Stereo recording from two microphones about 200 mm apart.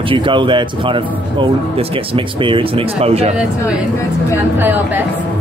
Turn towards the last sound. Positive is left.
turn(degrees=-10)  # may be behind; listen again after turning